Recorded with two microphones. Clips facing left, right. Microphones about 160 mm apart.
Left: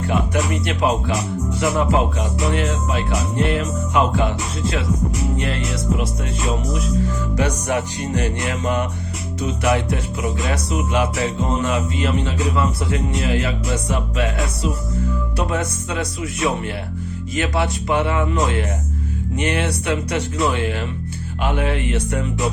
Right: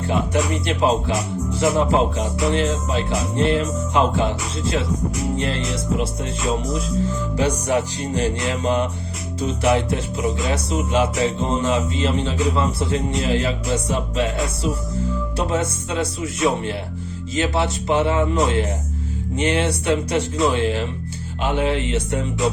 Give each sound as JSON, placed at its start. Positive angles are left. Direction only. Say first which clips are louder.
{"t": 0.1, "sound": "music", "louder": "right 1 dB", "side_deg": -30}
{"t": 7.3, "sound": "music", "louder": "right 2 dB", "side_deg": -30}